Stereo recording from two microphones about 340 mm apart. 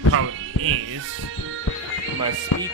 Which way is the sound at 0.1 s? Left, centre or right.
Right.